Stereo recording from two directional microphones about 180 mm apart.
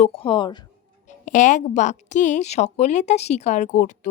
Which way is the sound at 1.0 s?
45° left (ahead or behind).